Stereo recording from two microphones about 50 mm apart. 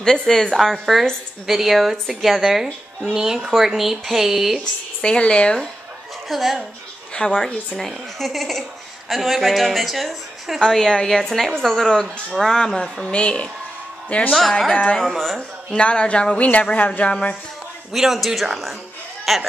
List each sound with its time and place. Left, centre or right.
0.0 s a woman's voice: centre
0.6 s a woman's voice: centre
5.0 s speech: left
6.2 s speech: centre
7.2 s speech: left
7.7 s a woman's voice: centre; by 14.3 s left
14.7 s speech: left
15.0 s a woman's voice: centre
15.7 s speech: left
16.4 s speech: left
17.0 s speech: left
17.9 s a woman's voice: centre